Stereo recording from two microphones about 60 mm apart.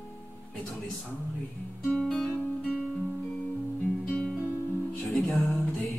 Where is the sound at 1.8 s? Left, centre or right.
Centre.